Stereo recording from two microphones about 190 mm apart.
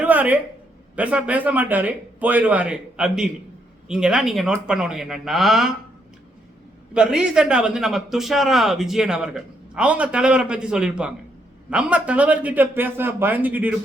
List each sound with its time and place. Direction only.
0.0 s a sound: 10° right (ahead or behind)
0.9 s a man's voice: 5° right (ahead or behind)
6.9 s a man's voice: 5° right (ahead or behind)